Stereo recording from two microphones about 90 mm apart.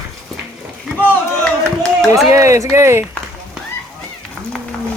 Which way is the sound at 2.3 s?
35° right (ahead or behind).